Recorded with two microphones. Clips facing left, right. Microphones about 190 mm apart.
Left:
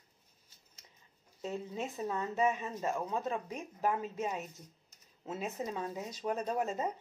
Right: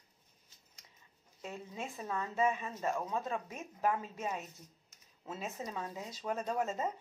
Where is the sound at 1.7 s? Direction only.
20° left (ahead or behind).